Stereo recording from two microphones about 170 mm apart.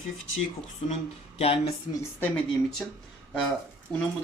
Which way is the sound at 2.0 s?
10° left (ahead or behind).